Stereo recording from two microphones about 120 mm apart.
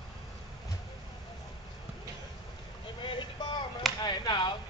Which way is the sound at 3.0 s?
45° left (ahead or behind).